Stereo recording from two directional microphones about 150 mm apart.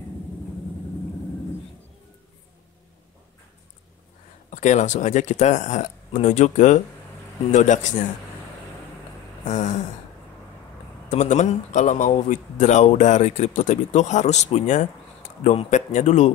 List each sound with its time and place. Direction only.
4.5 s speech: 55° left (ahead or behind)
9.4 s speech: 50° left (ahead or behind)
11.1 s speech: 50° left (ahead or behind)